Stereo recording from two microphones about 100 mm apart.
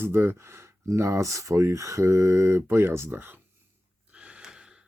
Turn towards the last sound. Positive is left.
turn(degrees=-25)  # may be behind; listen again after turning